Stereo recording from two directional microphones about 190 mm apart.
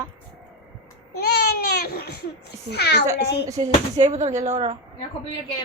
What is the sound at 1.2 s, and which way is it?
Baby cry, 55° left (ahead or behind).